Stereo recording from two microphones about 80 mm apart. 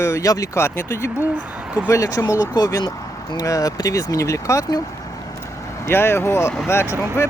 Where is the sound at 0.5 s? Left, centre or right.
Left.